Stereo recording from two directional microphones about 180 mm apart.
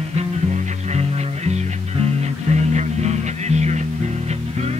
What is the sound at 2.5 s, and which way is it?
Music, 40° right (ahead or behind).